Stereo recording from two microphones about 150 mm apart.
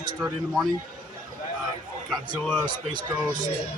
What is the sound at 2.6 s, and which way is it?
Speech, 30° right (ahead or behind).